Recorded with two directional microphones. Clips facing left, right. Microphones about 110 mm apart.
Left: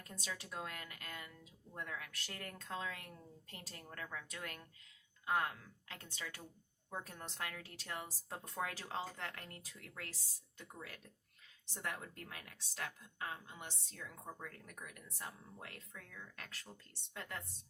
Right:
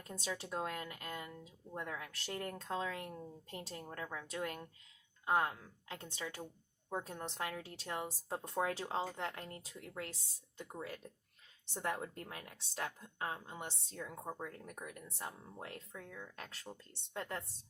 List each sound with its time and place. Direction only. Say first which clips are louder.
0.1 s speech: right 6 dB; 25° right (ahead or behind)